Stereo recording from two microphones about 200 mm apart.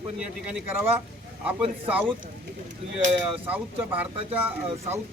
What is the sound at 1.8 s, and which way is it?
Speech, 10° right (ahead or behind).